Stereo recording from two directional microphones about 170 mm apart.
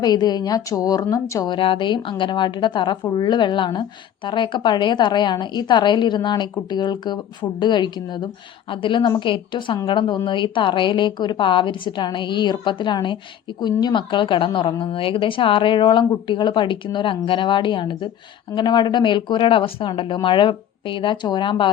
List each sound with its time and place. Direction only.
0.0 s a woman's voice: 25° left (ahead or behind)